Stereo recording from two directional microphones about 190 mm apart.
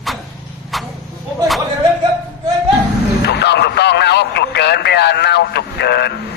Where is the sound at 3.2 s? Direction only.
60° left (ahead or behind).